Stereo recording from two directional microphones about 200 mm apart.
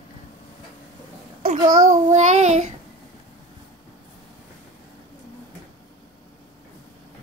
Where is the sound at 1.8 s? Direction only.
40° right (ahead or behind).